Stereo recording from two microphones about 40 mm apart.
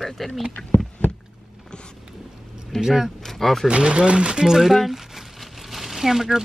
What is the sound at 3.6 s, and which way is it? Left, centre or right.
Speech, right.